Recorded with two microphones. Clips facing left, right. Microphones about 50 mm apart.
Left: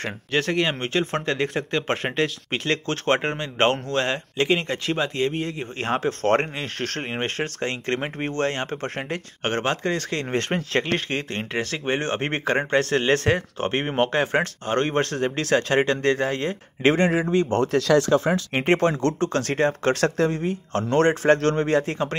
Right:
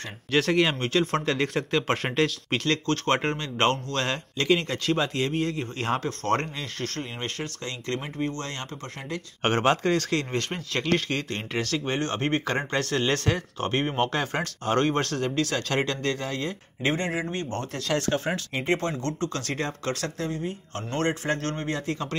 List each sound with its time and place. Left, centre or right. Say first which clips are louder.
0.3 s speech: right 1 dB; centre
6.2 s speech: left 7 dB; left
9.4 s speech: right 2 dB; centre
9.9 s speech: right 1 dB; centre
10.3 s speech: left 6 dB; left
10.9 s speech: even; centre
14.7 s speech: even; centre
15.2 s speech: left 5 dB; left
16.8 s speech: left 7 dB; left
18.5 s speech: left 7 dB; left
19.1 s speech: left 6 dB; left
19.9 s speech: left 9 dB; left
21.8 s speech: left 4 dB; left